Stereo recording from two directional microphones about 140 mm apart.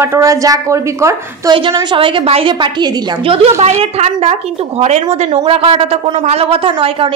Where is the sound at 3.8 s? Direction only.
50° right (ahead or behind).